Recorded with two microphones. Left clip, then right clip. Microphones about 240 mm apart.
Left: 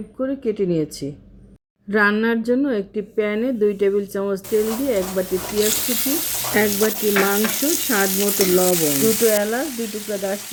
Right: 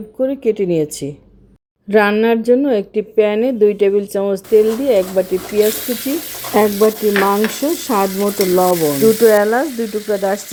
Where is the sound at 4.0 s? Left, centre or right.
Centre.